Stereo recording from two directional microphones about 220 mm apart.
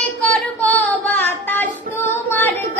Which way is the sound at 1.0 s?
10° left (ahead or behind).